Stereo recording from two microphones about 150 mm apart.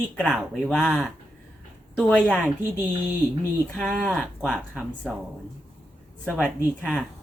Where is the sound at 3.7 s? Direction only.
Centre (ahead or behind).